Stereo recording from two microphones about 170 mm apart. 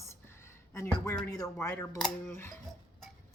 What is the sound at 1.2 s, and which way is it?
Speech, 20° left (ahead or behind).